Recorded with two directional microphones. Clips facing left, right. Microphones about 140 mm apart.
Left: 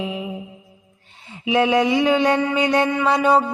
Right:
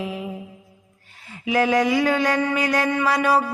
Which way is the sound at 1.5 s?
25° left (ahead or behind).